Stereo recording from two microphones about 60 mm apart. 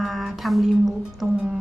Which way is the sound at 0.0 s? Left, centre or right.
Centre.